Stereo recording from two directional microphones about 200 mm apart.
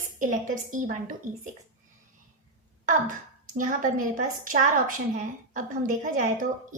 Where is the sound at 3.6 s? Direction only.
40° right (ahead or behind).